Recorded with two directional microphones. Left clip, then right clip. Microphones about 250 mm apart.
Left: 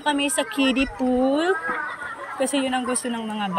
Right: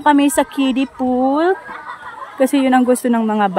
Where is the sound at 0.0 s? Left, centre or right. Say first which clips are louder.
Right 10 dB; centre.